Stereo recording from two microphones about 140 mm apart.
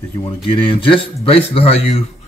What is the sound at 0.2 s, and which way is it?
Speech, 40° left (ahead or behind).